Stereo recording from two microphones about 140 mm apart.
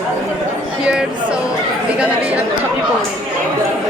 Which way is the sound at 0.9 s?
5° right (ahead or behind).